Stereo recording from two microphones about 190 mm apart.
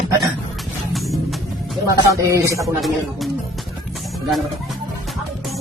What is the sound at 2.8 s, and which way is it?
Speech, centre (ahead or behind).